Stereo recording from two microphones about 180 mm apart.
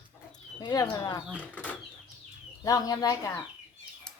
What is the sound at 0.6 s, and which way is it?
Speech, 20° left (ahead or behind).